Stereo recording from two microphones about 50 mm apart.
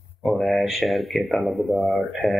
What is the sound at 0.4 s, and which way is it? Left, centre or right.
Speech, centre.